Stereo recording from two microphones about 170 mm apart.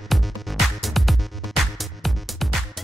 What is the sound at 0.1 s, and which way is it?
Music, centre (ahead or behind).